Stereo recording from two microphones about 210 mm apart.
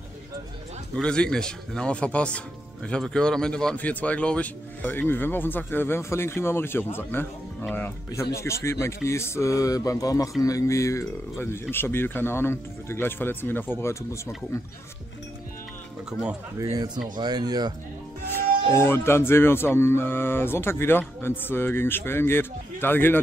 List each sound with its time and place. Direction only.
0.9 s speech: 5° left (ahead or behind)
16.1 s speech: 5° right (ahead or behind)
16.5 s speech: 15° right (ahead or behind)
18.8 s speech: 10° left (ahead or behind)